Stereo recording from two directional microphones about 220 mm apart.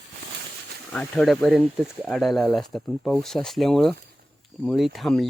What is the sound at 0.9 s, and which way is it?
Speech, centre (ahead or behind).